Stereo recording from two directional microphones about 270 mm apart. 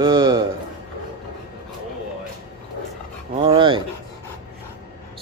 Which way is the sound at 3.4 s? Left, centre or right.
Centre.